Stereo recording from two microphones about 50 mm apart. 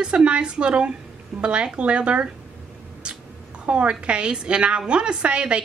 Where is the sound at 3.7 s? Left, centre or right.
Right.